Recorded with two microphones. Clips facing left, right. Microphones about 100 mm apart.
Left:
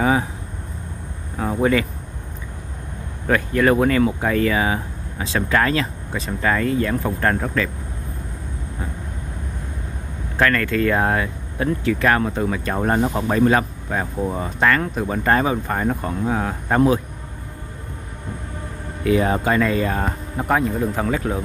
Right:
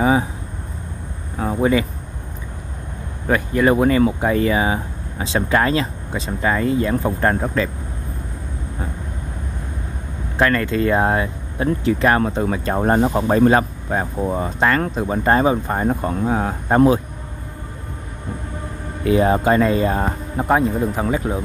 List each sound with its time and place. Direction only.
1.4 s speech: 15° right (ahead or behind)
3.3 s speech: 15° right (ahead or behind)
10.3 s speech: 20° right (ahead or behind)
19.0 s speech: 30° right (ahead or behind)